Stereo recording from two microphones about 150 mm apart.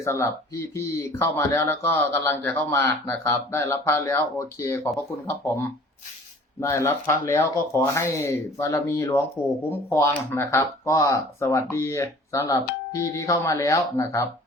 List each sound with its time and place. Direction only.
0.0 s speech: 20° left (ahead or behind)